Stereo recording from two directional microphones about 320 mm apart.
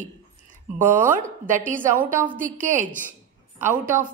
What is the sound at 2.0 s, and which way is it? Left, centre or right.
Speech, centre.